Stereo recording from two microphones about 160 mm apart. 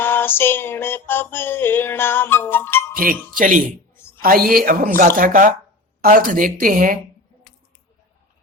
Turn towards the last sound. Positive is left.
turn(degrees=-60)  # may be behind; listen again after turning